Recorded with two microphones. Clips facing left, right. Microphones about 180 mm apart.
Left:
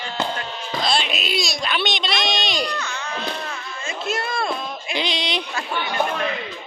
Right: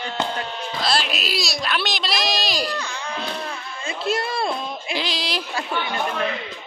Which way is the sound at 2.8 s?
30° right (ahead or behind).